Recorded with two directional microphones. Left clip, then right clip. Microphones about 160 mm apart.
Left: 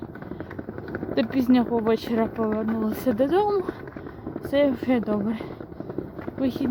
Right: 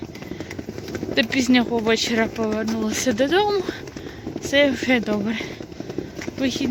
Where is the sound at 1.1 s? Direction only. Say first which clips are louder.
Right 3 dB; 15° left (ahead or behind).